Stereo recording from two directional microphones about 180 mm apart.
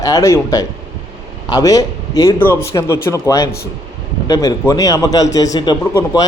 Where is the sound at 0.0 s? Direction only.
15° left (ahead or behind).